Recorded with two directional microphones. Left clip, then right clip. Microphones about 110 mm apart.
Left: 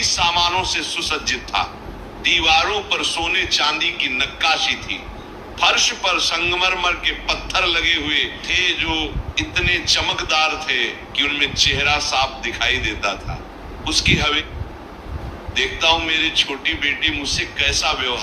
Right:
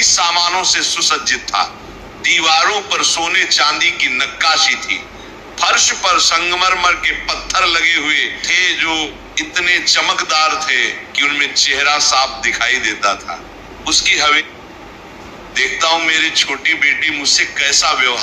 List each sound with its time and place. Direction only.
0.0 s a man's voice: 25° left (ahead or behind)
14.2 s a man's voice: 25° left (ahead or behind)
15.5 s a man's voice: 25° left (ahead or behind)